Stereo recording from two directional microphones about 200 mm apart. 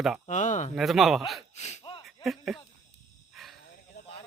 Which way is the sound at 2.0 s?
Centre (ahead or behind).